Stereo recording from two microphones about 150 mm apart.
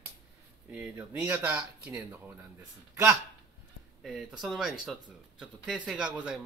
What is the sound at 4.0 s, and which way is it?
Speech, centre (ahead or behind).